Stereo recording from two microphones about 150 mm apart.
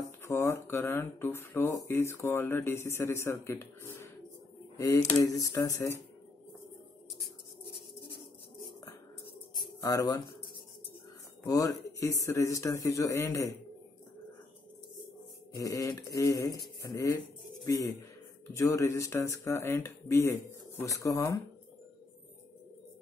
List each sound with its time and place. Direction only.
0.2 s speech: 15° left (ahead or behind)
9.8 s speech: 20° left (ahead or behind)
11.4 s speech: 25° left (ahead or behind)
15.5 s speech: 20° left (ahead or behind)
18.5 s speech: 20° left (ahead or behind)